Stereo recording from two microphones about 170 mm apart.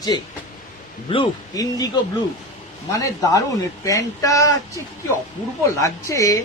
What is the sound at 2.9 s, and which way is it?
Speech, 20° left (ahead or behind).